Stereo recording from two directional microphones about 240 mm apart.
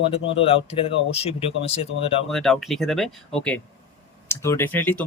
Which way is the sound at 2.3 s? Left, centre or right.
Centre.